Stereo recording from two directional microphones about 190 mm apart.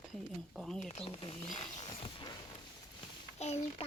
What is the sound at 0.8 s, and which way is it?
Speech, 30° left (ahead or behind).